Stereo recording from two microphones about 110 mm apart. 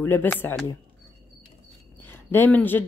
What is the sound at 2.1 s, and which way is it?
Speech, 20° left (ahead or behind).